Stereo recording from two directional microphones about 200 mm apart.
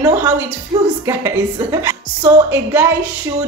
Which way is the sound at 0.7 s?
20° right (ahead or behind).